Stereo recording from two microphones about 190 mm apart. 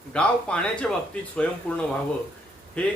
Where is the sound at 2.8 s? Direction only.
5° left (ahead or behind).